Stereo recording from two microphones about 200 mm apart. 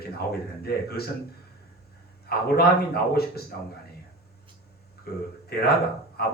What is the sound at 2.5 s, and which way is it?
Speech, 50° left (ahead or behind).